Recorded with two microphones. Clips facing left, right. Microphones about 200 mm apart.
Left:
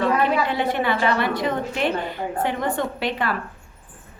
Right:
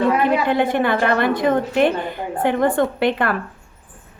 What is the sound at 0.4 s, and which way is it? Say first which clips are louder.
A woman's voice: right 5 dB; 50° right (ahead or behind).